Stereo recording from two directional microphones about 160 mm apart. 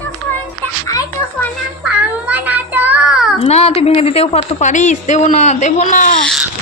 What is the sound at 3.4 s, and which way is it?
A woman's voice, 40° left (ahead or behind).